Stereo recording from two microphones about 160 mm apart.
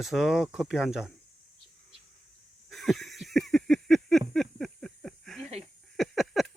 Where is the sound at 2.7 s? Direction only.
Centre (ahead or behind).